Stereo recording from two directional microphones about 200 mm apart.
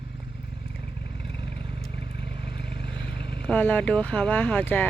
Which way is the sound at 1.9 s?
25° right (ahead or behind).